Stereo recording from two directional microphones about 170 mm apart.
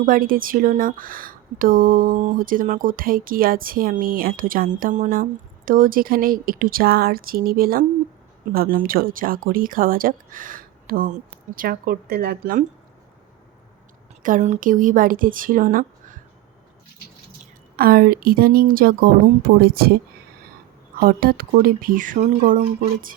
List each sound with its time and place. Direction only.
0.0 s speech: 55° right (ahead or behind)
14.2 s a woman's voice: 50° right (ahead or behind)
17.7 s speech: 60° right (ahead or behind)
21.0 s speech: 60° right (ahead or behind)